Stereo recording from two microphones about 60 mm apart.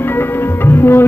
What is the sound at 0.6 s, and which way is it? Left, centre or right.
Tabla, left.